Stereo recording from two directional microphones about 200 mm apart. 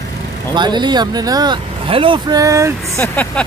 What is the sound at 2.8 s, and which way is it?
Speech, 10° left (ahead or behind).